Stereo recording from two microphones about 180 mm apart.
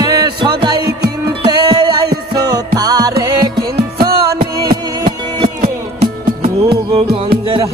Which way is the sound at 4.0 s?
55° right (ahead or behind).